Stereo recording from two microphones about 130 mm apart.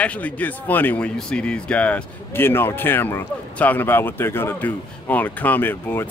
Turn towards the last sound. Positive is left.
turn(degrees=15)  # may be behind; listen again after turning